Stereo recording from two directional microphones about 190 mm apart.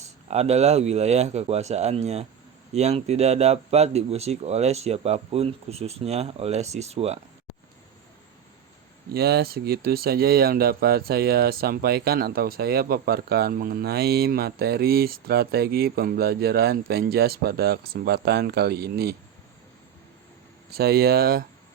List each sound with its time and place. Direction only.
0.0 s speech: 35° right (ahead or behind)
9.1 s speech: 55° right (ahead or behind)
20.7 s speech: 55° right (ahead or behind)